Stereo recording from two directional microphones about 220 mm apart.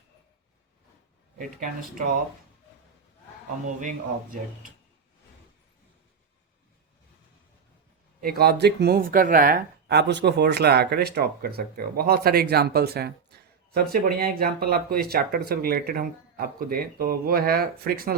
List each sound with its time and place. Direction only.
1.4 s speech: 35° right (ahead or behind)
3.8 s speech: 35° right (ahead or behind)
8.2 s speech: 45° right (ahead or behind)